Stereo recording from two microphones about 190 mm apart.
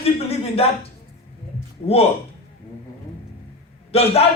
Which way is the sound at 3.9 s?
30° left (ahead or behind).